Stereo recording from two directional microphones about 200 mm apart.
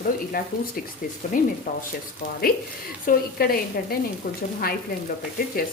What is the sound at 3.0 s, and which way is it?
Speech, 50° left (ahead or behind).